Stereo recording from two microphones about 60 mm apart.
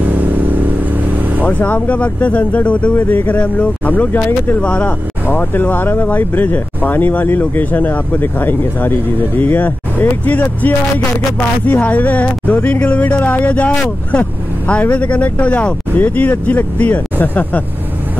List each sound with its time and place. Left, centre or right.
0.0 s vehicle: right
1.4 s speech: left
4.6 s speech: centre
5.3 s speech: left